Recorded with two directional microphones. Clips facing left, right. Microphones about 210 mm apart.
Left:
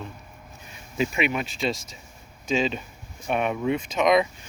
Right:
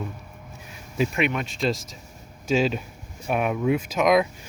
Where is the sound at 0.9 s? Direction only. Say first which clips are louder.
Right 1 dB; centre (ahead or behind).